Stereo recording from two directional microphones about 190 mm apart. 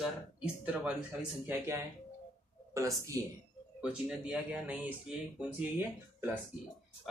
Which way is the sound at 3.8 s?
5° right (ahead or behind).